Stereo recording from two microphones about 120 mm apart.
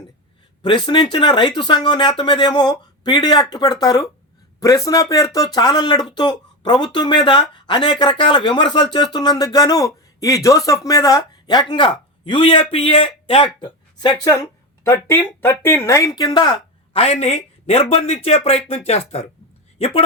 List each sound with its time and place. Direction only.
1.1 s a man's voice: 40° left (ahead or behind)
14.4 s speech: 20° left (ahead or behind)
16.2 s speech: 40° left (ahead or behind)
16.9 s speech: 60° left (ahead or behind)